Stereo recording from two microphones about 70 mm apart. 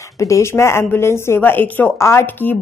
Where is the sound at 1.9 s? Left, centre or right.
Left.